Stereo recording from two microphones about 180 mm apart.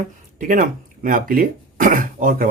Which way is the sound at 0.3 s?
50° right (ahead or behind).